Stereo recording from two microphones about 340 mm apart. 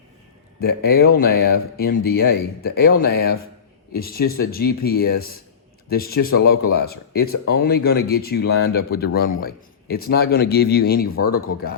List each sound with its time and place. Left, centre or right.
0.6 s speech: left